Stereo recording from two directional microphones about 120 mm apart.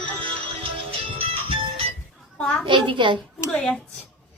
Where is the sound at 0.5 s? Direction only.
50° right (ahead or behind).